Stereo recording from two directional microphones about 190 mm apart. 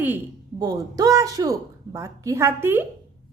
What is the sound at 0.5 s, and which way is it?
Speech, 20° right (ahead or behind).